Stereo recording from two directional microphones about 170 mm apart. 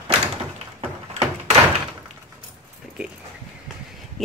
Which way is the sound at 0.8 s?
40° right (ahead or behind).